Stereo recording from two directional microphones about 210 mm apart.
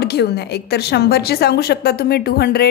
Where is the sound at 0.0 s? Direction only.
50° left (ahead or behind).